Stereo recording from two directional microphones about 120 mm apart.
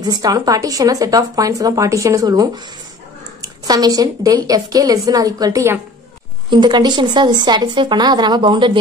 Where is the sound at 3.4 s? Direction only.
35° right (ahead or behind).